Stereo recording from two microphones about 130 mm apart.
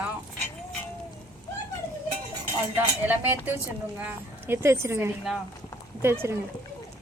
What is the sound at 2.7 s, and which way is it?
A woman's voice, 15° right (ahead or behind).